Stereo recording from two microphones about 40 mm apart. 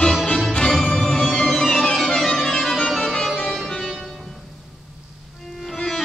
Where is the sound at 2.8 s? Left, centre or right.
Centre.